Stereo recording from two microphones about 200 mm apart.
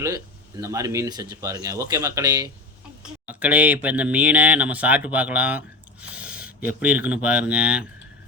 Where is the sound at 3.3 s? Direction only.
5° right (ahead or behind).